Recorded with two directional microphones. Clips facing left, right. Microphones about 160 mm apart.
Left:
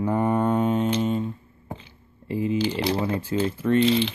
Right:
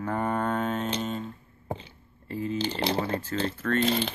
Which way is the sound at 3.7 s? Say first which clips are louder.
Left 6 dB; 45° right (ahead or behind).